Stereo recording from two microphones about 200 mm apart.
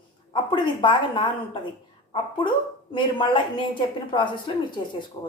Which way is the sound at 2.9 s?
25° left (ahead or behind).